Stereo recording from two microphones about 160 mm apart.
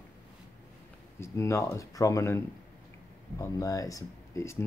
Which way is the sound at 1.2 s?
20° left (ahead or behind).